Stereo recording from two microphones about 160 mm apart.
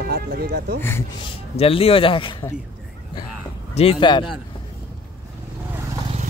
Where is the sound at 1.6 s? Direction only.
35° left (ahead or behind).